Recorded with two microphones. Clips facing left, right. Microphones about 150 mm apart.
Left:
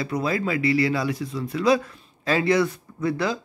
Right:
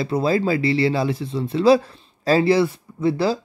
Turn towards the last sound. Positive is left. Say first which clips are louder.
# right 5 dB
turn(degrees=-30)  # may be behind; listen again after turning